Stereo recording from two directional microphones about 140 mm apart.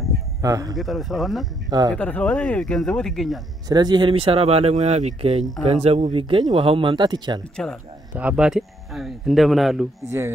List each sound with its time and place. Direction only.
0.4 s speech: 25° right (ahead or behind)
0.7 s speech: centre (ahead or behind)
1.7 s speech: 30° right (ahead or behind)
2.0 s speech: 10° left (ahead or behind)
3.6 s speech: 30° right (ahead or behind); by 6.1 s 50° right (ahead or behind)
6.1 s speech: 40° right (ahead or behind)
7.5 s speech: 5° left (ahead or behind)
8.2 s speech: 10° right (ahead or behind)
10.0 s speech: 15° right (ahead or behind)